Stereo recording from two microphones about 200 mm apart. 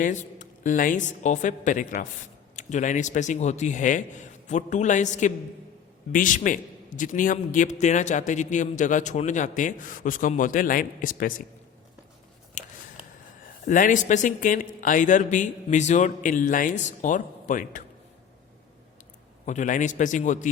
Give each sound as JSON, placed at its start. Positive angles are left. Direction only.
{"t": 0.0, "sound": "a man's voice", "side_deg": 40}
{"t": 12.6, "sound": "a sound", "side_deg": 35}
{"t": 13.7, "sound": "a man's voice", "side_deg": 40}
{"t": 19.5, "sound": "a man's voice", "side_deg": 40}